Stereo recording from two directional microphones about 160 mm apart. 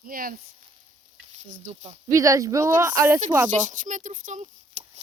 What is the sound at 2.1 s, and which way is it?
Speech, 20° right (ahead or behind).